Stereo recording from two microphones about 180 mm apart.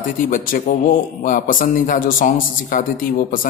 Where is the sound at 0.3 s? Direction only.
50° left (ahead or behind).